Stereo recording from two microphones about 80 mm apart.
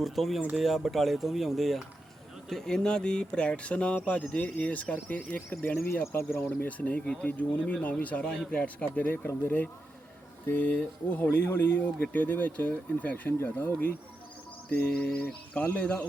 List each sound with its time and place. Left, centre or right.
0.0 s speech: centre; by 5.7 s left
6.1 s speech: left; by 16.0 s centre